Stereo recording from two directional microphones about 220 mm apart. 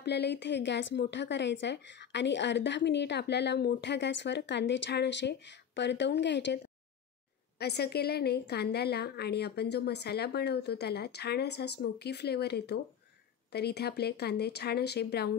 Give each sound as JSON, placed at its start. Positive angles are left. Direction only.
{"t": 0.0, "sound": "a woman's voice", "side_deg": 50}